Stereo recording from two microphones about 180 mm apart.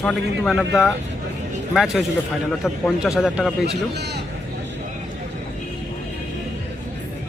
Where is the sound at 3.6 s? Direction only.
65° right (ahead or behind).